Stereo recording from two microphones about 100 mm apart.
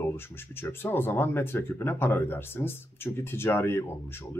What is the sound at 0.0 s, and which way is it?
Speech, 25° left (ahead or behind).